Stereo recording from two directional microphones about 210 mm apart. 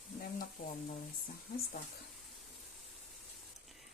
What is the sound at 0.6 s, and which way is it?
Speech, 45° left (ahead or behind).